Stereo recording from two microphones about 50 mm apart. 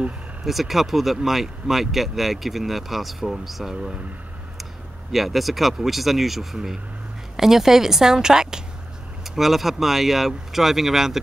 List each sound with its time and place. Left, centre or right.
0.5 s speech: centre
3.7 s a woman's voice: centre
5.1 s a woman's voice: centre